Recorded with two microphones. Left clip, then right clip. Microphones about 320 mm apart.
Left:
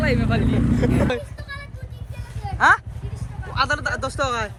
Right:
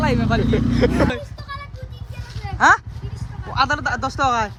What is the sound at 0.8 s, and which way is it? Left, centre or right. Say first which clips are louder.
Speech: right 6 dB; right.